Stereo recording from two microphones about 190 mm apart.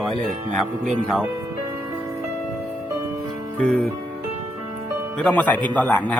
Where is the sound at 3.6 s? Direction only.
5° left (ahead or behind).